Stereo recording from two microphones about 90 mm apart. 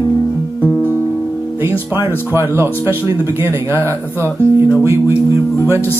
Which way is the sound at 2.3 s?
30° right (ahead or behind).